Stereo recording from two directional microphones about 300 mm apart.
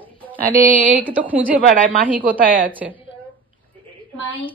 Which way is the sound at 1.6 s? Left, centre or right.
Right.